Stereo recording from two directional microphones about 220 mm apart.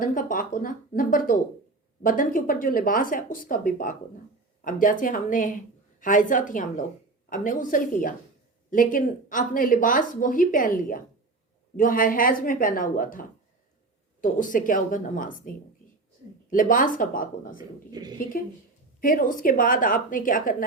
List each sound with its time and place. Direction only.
0.0 s speech: 35° left (ahead or behind)
18.0 s a woman's voice: 20° right (ahead or behind)
18.3 s speech: 40° left (ahead or behind)